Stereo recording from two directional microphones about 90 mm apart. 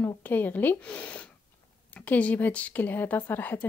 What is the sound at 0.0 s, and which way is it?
A woman's voice, 20° left (ahead or behind).